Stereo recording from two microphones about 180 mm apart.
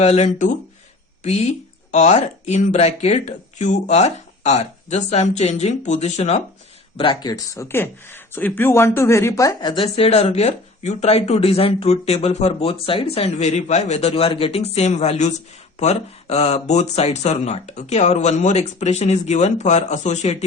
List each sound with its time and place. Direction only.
0.0 s speech: 35° left (ahead or behind)